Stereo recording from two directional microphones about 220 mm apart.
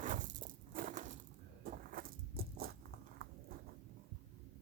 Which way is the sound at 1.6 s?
40° right (ahead or behind).